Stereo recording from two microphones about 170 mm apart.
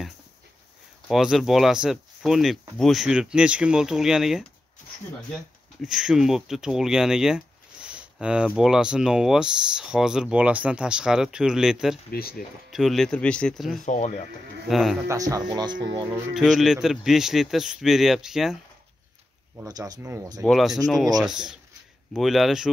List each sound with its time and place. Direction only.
1.0 s speech: centre (ahead or behind)
12.1 s speech: 60° left (ahead or behind)
12.7 s speech: centre (ahead or behind)
13.8 s speech: 45° left (ahead or behind)
14.7 s speech: centre (ahead or behind)
15.0 s speech: 20° right (ahead or behind)
16.3 s speech: centre (ahead or behind)
19.5 s speech: 20° right (ahead or behind)
20.4 s speech: centre (ahead or behind)